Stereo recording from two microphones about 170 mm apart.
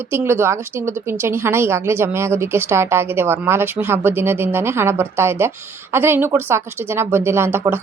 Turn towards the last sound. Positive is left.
turn(degrees=-15)  # may be behind; listen again after turning